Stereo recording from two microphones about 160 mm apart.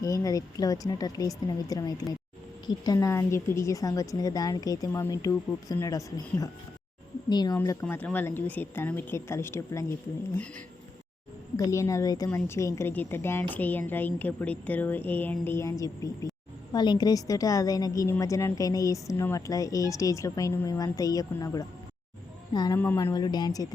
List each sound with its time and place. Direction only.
0.0 s a woman's voice: 20° left (ahead or behind)
11.5 s a woman's voice: 20° left (ahead or behind)
22.8 s a woman's voice: 15° left (ahead or behind)
23.1 s a woman's voice: 25° left (ahead or behind)